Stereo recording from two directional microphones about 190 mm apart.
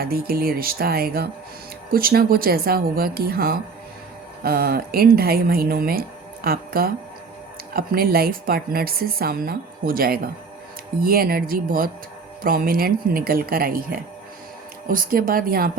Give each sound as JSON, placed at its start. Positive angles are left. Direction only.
{"t": 0.0, "sound": "speech", "side_deg": -50}